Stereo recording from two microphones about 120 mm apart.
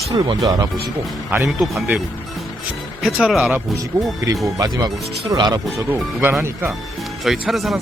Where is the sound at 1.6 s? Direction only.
5° right (ahead or behind).